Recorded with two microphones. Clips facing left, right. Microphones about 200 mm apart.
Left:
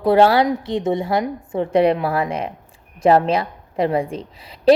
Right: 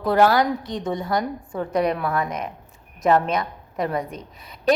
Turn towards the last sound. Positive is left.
turn(degrees=30)  # may be behind; listen again after turning